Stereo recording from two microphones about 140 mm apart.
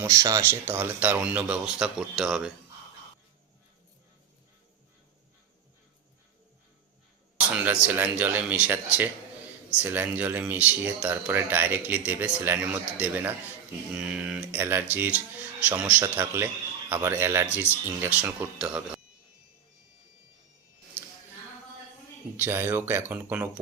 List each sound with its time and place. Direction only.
0.0 s speech: 20° right (ahead or behind); by 2.5 s centre (ahead or behind)
7.3 s speech: 10° right (ahead or behind)
22.4 s speech: 15° right (ahead or behind)